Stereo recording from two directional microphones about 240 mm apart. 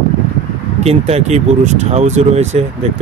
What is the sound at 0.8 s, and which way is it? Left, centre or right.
Speech, right.